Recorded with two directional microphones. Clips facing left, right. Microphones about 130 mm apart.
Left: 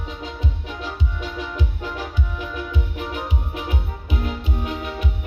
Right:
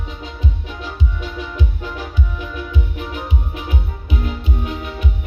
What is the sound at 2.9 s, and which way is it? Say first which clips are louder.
Music: right 1 dB; 50° left (ahead or behind).